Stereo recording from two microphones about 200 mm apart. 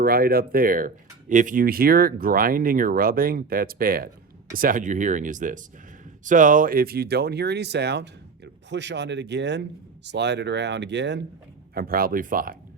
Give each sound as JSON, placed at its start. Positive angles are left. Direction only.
{"t": 0.0, "sound": "speech", "side_deg": -50}
{"t": 11.7, "sound": "speech", "side_deg": -45}